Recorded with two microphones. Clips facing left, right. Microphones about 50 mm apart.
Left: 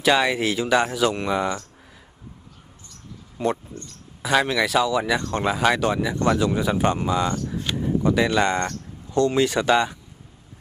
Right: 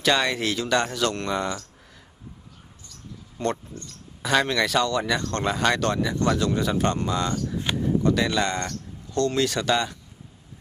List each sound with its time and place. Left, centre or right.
0.0 s speech: centre
3.4 s speech: centre